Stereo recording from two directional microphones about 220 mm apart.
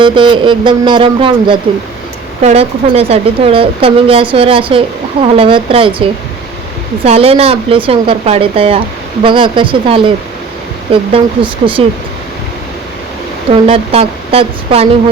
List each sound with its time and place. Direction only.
0.0 s speech: 20° right (ahead or behind)
13.5 s speech: 25° right (ahead or behind)